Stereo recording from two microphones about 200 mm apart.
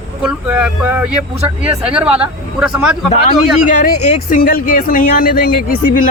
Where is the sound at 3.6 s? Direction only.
40° left (ahead or behind).